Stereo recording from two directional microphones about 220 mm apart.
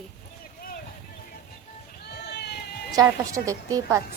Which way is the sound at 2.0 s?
50° left (ahead or behind).